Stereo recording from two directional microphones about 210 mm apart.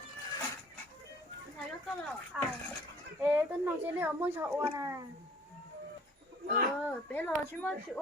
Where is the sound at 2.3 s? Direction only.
5° right (ahead or behind).